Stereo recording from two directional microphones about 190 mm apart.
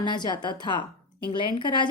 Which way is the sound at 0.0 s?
25° left (ahead or behind).